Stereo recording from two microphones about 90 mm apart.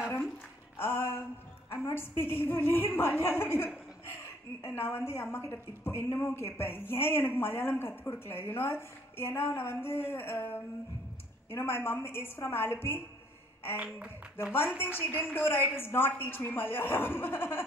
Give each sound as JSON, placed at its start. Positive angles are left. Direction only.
{"t": 0.7, "sound": "speech", "side_deg": 25}
{"t": 13.8, "sound": "speech", "side_deg": -15}
{"t": 14.8, "sound": "speech", "side_deg": 25}